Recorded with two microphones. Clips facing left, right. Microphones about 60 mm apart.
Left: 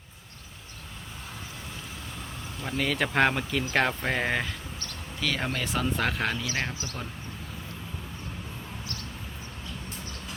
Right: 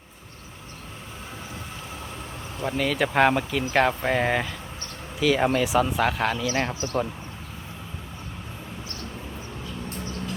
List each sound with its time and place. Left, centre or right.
2.6 s speech: centre
6.7 s speech: right